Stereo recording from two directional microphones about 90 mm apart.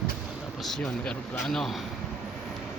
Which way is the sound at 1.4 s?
5° left (ahead or behind).